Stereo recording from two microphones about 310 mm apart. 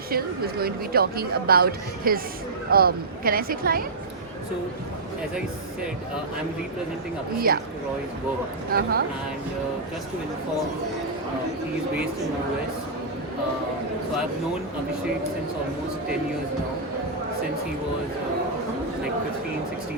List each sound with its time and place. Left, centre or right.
0.1 s a woman's voice: right
7.3 s a woman's voice: right
8.7 s a woman's voice: right